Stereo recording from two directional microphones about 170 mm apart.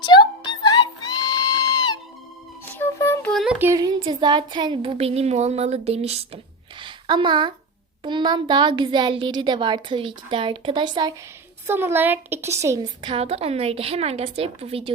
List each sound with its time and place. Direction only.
0.0 s music: 25° left (ahead or behind)
2.6 s music: 10° left (ahead or behind)
3.3 s a child's voice: 5° right (ahead or behind); by 11.1 s 25° right (ahead or behind)
11.6 s a woman's voice: 15° right (ahead or behind); by 14.9 s 35° right (ahead or behind)